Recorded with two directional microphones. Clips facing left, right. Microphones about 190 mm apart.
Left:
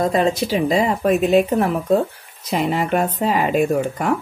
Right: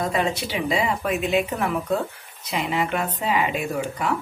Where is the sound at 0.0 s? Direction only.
35° left (ahead or behind).